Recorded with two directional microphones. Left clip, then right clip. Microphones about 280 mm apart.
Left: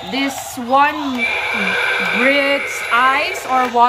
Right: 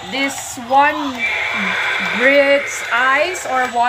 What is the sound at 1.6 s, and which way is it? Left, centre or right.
Speech, left.